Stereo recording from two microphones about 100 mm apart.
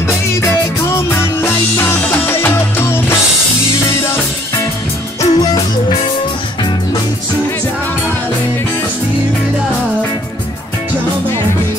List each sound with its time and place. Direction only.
0.9 s music: 25° left (ahead or behind)
5.2 s music: 40° left (ahead or behind)